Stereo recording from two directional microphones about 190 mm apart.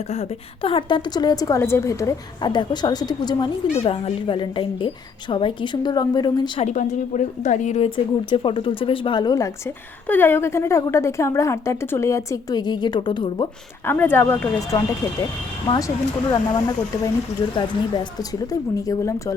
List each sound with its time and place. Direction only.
0.1 s a woman's voice: 30° left (ahead or behind)
6.7 s a woman's voice: 40° left (ahead or behind)
7.9 s speech: 25° left (ahead or behind)
13.8 s speech: 10° left (ahead or behind)
15.6 s a woman's voice: 25° left (ahead or behind)